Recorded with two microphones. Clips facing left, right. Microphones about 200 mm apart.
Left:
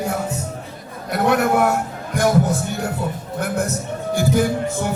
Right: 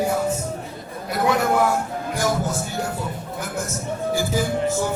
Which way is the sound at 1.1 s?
60° left (ahead or behind).